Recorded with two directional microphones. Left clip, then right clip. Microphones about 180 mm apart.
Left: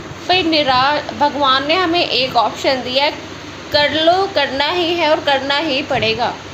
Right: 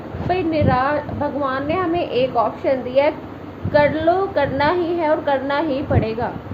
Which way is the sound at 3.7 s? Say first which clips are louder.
Left 3 dB; centre (ahead or behind).